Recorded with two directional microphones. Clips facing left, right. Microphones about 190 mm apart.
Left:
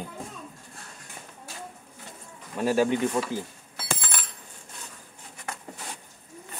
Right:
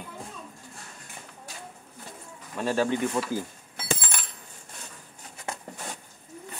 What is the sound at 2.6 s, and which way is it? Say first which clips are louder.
Speech: left 3 dB; 10° left (ahead or behind).